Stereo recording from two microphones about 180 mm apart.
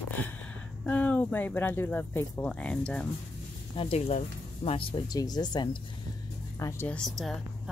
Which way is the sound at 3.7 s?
35° left (ahead or behind).